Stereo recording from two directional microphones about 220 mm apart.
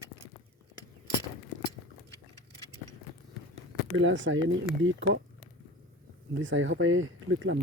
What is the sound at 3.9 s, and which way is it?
Speech, 60° right (ahead or behind).